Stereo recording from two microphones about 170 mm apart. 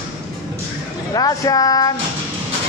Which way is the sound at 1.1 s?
20° left (ahead or behind).